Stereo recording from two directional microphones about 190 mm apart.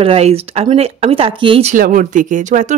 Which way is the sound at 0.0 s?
30° right (ahead or behind).